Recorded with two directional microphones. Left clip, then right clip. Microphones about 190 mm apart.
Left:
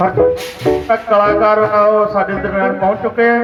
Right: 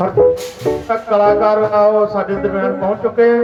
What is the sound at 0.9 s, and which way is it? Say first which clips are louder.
Speech: even; 75° right (ahead or behind).